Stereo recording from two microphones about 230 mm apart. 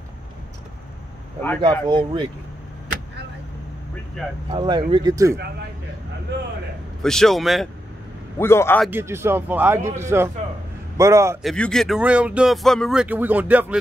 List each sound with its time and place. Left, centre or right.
1.6 s speech: right
4.5 s a man's voice: centre
7.0 s speech: centre
8.4 s a man's voice: centre
8.8 s a man's voice: centre
11.4 s speech: centre